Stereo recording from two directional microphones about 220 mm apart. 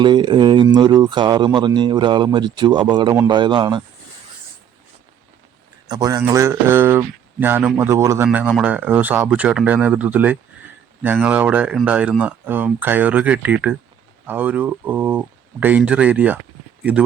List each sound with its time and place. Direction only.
0.0 s speech: 20° right (ahead or behind)
5.9 s speech: 15° right (ahead or behind)